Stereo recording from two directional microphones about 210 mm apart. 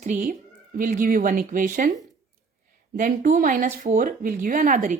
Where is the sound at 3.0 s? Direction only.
40° right (ahead or behind).